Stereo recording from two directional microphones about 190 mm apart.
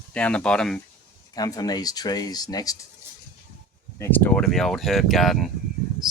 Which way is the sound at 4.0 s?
10° left (ahead or behind).